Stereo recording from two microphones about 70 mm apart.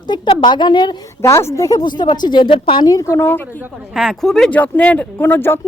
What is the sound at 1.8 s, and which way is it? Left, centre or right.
A woman's voice, left.